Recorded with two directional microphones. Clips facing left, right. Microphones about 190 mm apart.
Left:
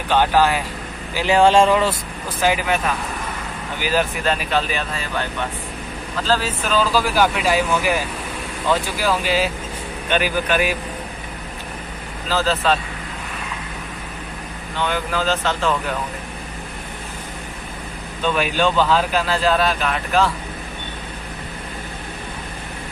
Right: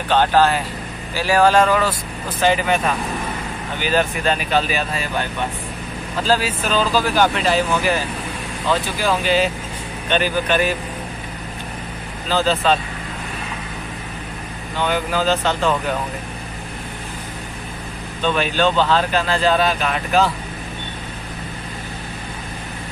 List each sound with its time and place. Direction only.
0.1 s speech: 10° left (ahead or behind)
1.1 s speech: 20° left (ahead or behind)
2.4 s speech: 5° left (ahead or behind)
3.8 s speech: 5° left (ahead or behind)
6.2 s speech: 15° right (ahead or behind)
6.7 s speech: 5° left (ahead or behind)
8.6 s speech: 10° left (ahead or behind)
12.3 s speech: centre (ahead or behind)
14.8 s speech: 5° right (ahead or behind)
18.2 s speech: 10° left (ahead or behind)